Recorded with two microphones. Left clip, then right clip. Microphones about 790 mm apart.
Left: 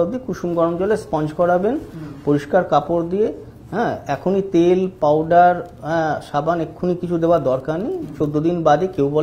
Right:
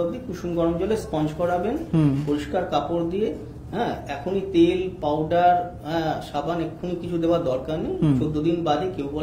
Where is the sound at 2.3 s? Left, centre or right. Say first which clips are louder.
Left 13 dB; left.